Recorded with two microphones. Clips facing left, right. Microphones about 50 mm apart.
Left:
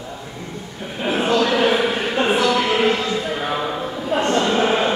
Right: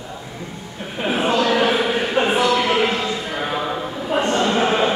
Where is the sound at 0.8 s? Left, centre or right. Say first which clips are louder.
Even; centre.